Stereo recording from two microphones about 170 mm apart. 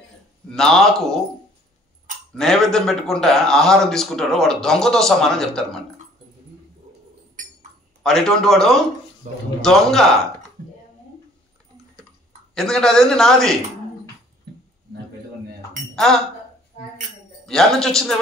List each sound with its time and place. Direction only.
0.5 s a man's voice: 5° left (ahead or behind)
2.3 s a man's voice: 5° left (ahead or behind)
8.0 s a man's voice: 5° left (ahead or behind)
9.2 s a man's voice: 45° right (ahead or behind)
9.6 s a man's voice: centre (ahead or behind)
12.5 s a man's voice: 5° left (ahead or behind)
17.5 s a man's voice: 5° left (ahead or behind)